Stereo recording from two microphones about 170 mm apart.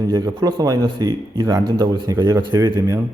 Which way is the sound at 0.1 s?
15° right (ahead or behind).